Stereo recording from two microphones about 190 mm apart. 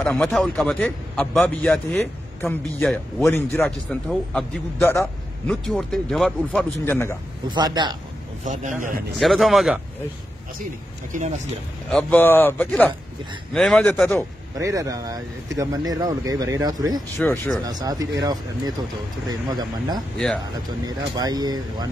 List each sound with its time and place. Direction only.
0.0 s a man's voice: 5° left (ahead or behind)
5.5 s a man's voice: centre (ahead or behind)
7.4 s speech: 20° right (ahead or behind)
8.5 s a man's voice: 40° right (ahead or behind)
9.2 s a man's voice: centre (ahead or behind)
11.1 s speech: 45° right (ahead or behind)
11.9 s a man's voice: 5° left (ahead or behind)
14.6 s speech: 15° right (ahead or behind)